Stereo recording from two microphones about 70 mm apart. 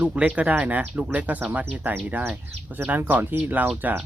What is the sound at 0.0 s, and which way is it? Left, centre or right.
Speech, centre.